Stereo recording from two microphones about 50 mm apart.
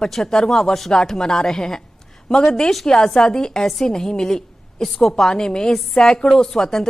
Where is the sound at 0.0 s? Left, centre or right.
Centre.